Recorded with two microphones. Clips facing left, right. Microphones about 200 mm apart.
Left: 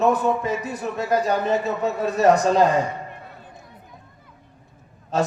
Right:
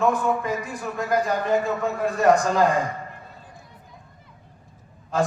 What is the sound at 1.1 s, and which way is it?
A man's voice, 30° left (ahead or behind).